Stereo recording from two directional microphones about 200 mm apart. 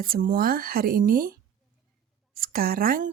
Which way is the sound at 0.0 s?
45° right (ahead or behind).